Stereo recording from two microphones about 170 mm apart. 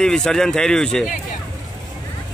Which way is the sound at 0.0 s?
5° left (ahead or behind).